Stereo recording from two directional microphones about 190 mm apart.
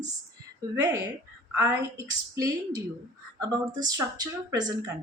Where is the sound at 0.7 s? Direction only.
20° right (ahead or behind).